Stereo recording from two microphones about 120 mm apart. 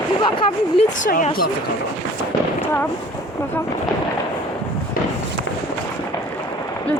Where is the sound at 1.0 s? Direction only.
90° left.